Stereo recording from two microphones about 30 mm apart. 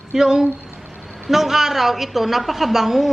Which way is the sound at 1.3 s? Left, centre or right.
Centre.